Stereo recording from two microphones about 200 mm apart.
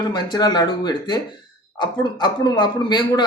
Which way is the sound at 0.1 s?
20° left (ahead or behind).